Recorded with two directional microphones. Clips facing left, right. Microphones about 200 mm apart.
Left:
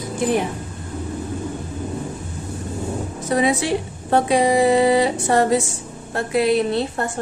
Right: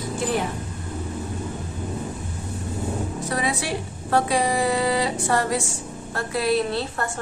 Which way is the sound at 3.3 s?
20° left (ahead or behind).